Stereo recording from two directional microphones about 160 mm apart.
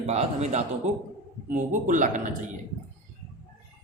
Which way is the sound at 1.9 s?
50° right (ahead or behind).